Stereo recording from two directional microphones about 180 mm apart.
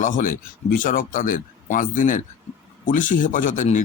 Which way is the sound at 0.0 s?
45° left (ahead or behind).